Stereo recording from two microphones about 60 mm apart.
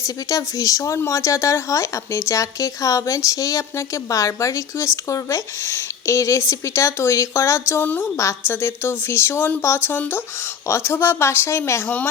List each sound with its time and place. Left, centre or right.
0.0 s a woman's voice: left